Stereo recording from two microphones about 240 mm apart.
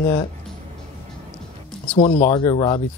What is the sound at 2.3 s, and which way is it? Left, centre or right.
Speech, centre.